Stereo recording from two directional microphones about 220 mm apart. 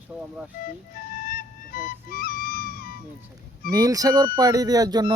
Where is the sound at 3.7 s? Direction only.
15° right (ahead or behind).